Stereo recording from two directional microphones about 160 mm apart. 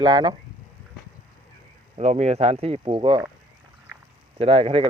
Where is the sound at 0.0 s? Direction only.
30° right (ahead or behind).